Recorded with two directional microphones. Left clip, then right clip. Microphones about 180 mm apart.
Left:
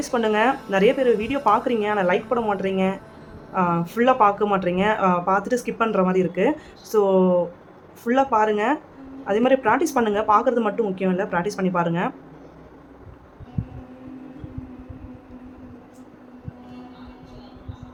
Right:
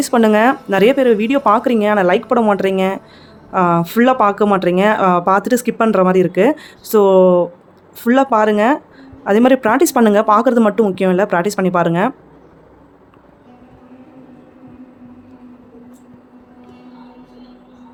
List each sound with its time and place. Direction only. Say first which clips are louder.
0.0 s speech: right 8 dB; 50° right (ahead or behind)